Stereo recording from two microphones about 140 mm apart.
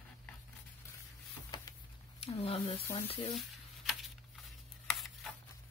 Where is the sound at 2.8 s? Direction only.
20° left (ahead or behind).